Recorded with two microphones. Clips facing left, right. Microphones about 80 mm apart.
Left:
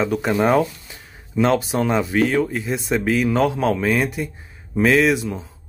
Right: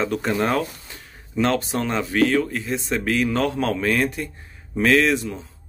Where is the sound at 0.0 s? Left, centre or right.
Centre.